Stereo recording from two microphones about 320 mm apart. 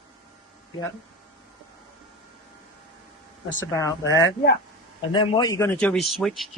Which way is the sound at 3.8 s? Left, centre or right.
Centre.